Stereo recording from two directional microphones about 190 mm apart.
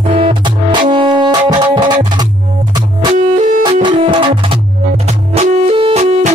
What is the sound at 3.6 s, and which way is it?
Music, 25° right (ahead or behind).